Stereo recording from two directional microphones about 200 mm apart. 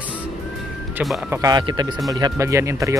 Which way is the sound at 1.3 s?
20° right (ahead or behind).